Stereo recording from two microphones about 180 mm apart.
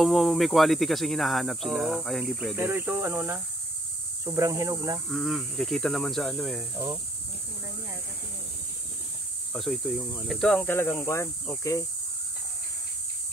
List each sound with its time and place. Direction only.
0.0 s speech: centre (ahead or behind)
2.5 s speech: 10° right (ahead or behind)
5.1 s speech: centre (ahead or behind)
9.5 s speech: centre (ahead or behind)